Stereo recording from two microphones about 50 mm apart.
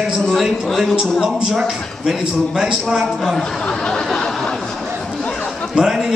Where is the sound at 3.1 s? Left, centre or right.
Centre.